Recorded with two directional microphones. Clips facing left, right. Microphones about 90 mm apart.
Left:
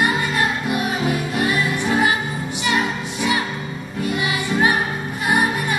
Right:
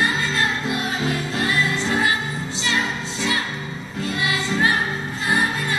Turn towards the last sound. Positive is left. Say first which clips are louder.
# left 3 dB
turn(degrees=15)  # may be behind; listen again after turning